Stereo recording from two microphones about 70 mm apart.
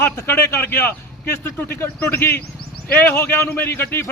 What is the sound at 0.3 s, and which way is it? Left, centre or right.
A man's voice, left.